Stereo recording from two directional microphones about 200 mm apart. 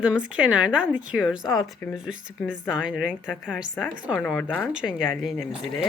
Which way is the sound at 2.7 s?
5° right (ahead or behind).